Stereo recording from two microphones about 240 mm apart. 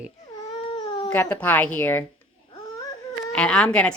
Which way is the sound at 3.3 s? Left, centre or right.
Centre.